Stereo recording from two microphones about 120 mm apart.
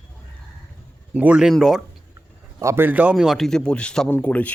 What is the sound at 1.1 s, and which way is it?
Speech, 10° right (ahead or behind).